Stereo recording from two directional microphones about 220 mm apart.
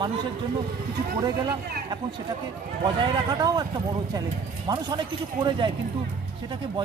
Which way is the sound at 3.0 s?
20° right (ahead or behind).